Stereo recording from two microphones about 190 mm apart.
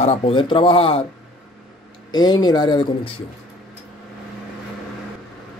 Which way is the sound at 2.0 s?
20° left (ahead or behind).